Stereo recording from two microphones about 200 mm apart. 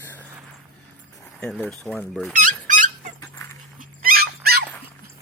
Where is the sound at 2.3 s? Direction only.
40° right (ahead or behind).